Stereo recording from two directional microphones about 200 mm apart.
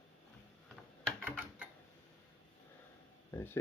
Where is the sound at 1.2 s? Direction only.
10° right (ahead or behind).